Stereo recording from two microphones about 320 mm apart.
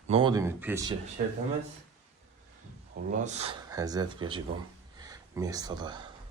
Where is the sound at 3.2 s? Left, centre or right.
Centre.